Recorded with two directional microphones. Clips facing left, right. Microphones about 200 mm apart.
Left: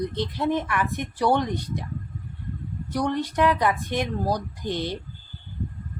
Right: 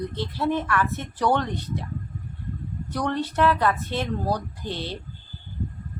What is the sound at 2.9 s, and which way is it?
Speech, 10° left (ahead or behind).